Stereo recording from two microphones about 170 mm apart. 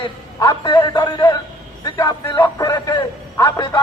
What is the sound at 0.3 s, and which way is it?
Speech, 25° left (ahead or behind).